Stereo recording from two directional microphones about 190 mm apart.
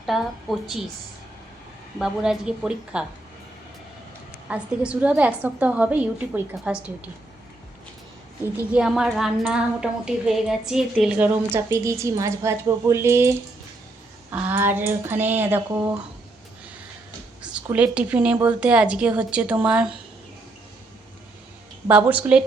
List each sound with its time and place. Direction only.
0.0 s a woman's voice: centre (ahead or behind)
2.0 s a woman's voice: 5° right (ahead or behind)
4.4 s a woman's voice: 5° right (ahead or behind)
8.7 s a woman's voice: 5° right (ahead or behind)
14.3 s a woman's voice: 10° right (ahead or behind)
17.4 s a woman's voice: 5° right (ahead or behind)
21.8 s a woman's voice: 5° right (ahead or behind)